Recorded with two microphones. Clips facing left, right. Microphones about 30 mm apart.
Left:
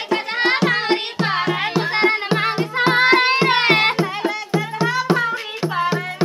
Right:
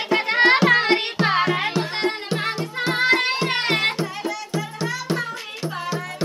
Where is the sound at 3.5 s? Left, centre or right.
Left.